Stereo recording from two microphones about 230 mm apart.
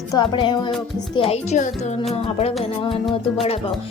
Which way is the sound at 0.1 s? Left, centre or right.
Centre.